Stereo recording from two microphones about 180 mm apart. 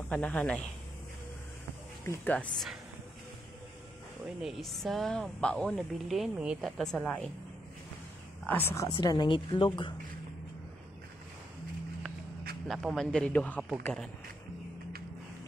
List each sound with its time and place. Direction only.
0.1 s speech: 10° left (ahead or behind)
2.0 s speech: 10° left (ahead or behind)
4.4 s a woman's voice: centre (ahead or behind)
8.5 s speech: 10° left (ahead or behind)
12.6 s a woman's voice: centre (ahead or behind)